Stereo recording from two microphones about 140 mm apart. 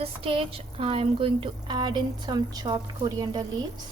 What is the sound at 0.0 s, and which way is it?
Speech, 40° right (ahead or behind).